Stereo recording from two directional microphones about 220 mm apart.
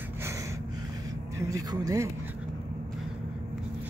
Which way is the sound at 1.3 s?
15° right (ahead or behind).